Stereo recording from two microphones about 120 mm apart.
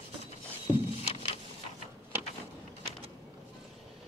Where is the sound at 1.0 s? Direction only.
55° left (ahead or behind).